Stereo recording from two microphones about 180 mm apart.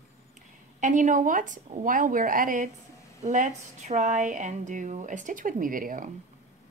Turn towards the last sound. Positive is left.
turn(degrees=-50)  # may be behind; listen again after turning